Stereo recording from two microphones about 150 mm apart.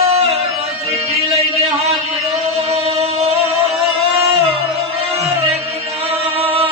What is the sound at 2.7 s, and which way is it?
Music, 45° right (ahead or behind).